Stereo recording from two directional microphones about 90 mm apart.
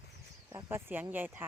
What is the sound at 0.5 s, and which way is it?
Speech, 25° right (ahead or behind).